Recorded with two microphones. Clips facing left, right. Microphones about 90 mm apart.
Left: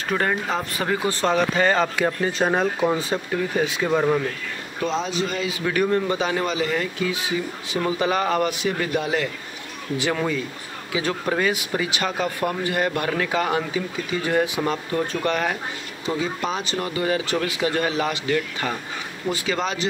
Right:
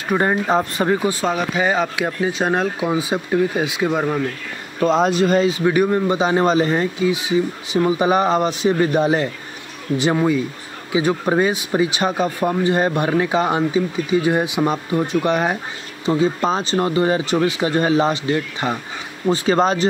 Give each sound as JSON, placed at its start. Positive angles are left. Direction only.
{"t": 0.1, "sound": "speech", "side_deg": -25}
{"t": 1.0, "sound": "speech", "side_deg": -5}
{"t": 4.7, "sound": "speech", "side_deg": -50}
{"t": 5.4, "sound": "speech", "side_deg": -30}
{"t": 5.8, "sound": "speech", "side_deg": -20}
{"t": 6.3, "sound": "speech", "side_deg": -35}
{"t": 7.0, "sound": "speech", "side_deg": -20}
{"t": 16.1, "sound": "speech", "side_deg": -30}
{"t": 19.2, "sound": "speech", "side_deg": -35}